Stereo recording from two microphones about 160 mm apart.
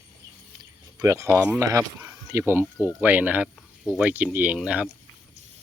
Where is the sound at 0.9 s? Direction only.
20° right (ahead or behind).